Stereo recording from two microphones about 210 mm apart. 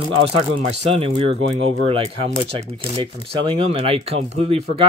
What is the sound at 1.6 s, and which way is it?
Speech, 25° right (ahead or behind).